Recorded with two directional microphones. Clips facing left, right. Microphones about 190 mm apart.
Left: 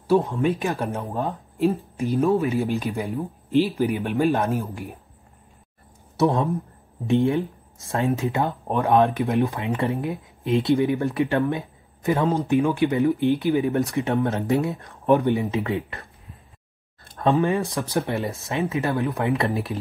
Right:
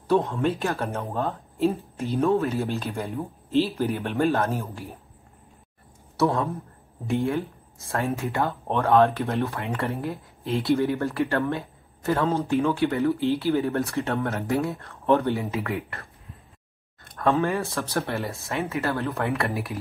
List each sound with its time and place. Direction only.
0.1 s speech: 5° left (ahead or behind)
1.6 s speech: centre (ahead or behind)
2.3 s speech: 15° left (ahead or behind)
6.1 s speech: 15° left (ahead or behind)
7.9 s speech: 20° left (ahead or behind)
17.0 s a sound: 25° left (ahead or behind)
17.3 s speech: 15° left (ahead or behind)